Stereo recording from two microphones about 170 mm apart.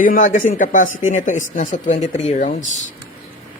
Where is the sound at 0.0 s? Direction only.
50° left (ahead or behind).